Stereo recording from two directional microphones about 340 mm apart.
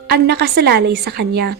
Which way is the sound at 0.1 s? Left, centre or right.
Right.